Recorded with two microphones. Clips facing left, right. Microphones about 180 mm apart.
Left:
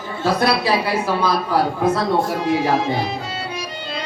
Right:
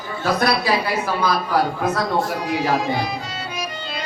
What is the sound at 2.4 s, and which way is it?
Music, 25° left (ahead or behind).